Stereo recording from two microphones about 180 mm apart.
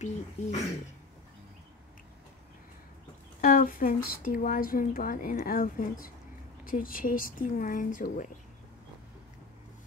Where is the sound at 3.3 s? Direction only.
50° left (ahead or behind).